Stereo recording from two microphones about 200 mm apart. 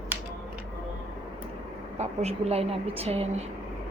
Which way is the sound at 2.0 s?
30° right (ahead or behind).